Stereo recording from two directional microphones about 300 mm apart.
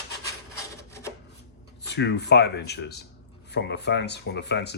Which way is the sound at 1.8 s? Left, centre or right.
Left.